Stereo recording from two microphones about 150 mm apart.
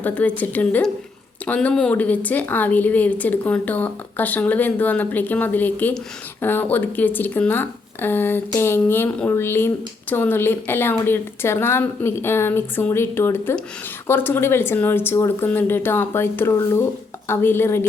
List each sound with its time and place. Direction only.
0.0 s speech: 10° left (ahead or behind)